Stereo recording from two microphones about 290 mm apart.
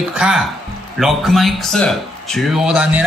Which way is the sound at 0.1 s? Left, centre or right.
Centre.